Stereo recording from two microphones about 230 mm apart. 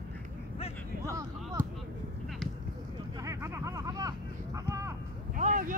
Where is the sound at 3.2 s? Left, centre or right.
Centre.